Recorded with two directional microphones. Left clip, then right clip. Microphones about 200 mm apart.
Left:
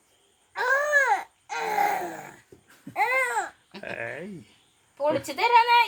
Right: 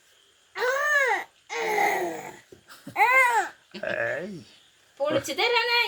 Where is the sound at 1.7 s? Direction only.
25° left (ahead or behind).